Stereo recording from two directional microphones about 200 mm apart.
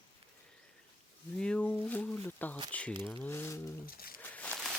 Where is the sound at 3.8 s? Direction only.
45° left (ahead or behind).